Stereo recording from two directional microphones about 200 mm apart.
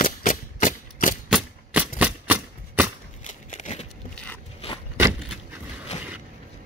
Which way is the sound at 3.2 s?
35° left (ahead or behind).